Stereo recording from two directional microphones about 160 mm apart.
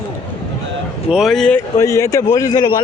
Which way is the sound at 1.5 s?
20° left (ahead or behind).